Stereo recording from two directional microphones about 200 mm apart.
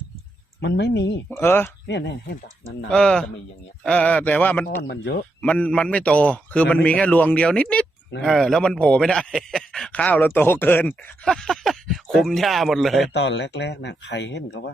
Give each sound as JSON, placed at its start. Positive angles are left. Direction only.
{"t": 0.6, "sound": "speech", "side_deg": 60}
{"t": 1.4, "sound": "a man's voice", "side_deg": 10}
{"t": 1.9, "sound": "speech", "side_deg": 60}
{"t": 2.9, "sound": "a man's voice", "side_deg": 5}
{"t": 4.8, "sound": "speech", "side_deg": 60}
{"t": 5.4, "sound": "a man's voice", "side_deg": 5}
{"t": 13.1, "sound": "speech", "side_deg": 60}